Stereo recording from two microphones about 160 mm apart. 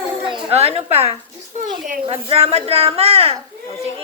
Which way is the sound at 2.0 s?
35° right (ahead or behind).